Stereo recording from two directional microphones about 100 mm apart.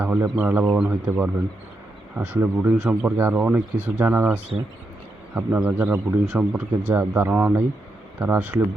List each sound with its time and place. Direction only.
0.0 s a man's voice: 20° right (ahead or behind)
5.8 s speech: 25° right (ahead or behind)
6.2 s a man's voice: 10° right (ahead or behind)